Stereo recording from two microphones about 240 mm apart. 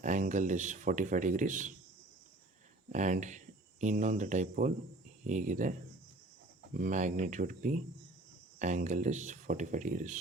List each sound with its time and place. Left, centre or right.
0.0 s speech: right
2.9 s speech: right
6.7 s speech: right